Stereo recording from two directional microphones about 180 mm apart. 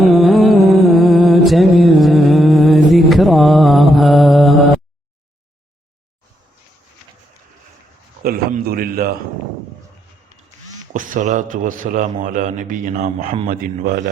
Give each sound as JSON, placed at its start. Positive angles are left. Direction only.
{"t": 0.0, "sound": "music", "side_deg": 0}
{"t": 8.2, "sound": "a sound", "side_deg": -55}
{"t": 10.9, "sound": "speech", "side_deg": -45}
{"t": 13.5, "sound": "speech", "side_deg": -55}